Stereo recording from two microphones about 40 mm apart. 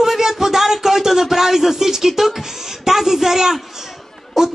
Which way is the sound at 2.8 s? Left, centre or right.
Centre.